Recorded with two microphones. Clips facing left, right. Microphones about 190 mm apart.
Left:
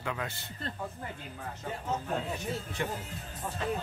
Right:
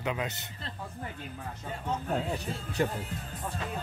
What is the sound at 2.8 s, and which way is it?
Speech, 40° right (ahead or behind).